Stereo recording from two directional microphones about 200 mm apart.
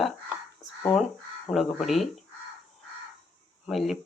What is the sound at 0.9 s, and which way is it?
Speech, 30° left (ahead or behind).